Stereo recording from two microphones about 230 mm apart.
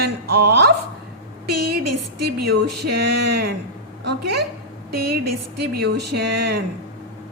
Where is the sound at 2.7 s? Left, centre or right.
Right.